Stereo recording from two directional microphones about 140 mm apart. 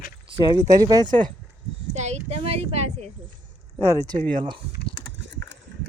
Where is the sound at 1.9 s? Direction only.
55° right (ahead or behind).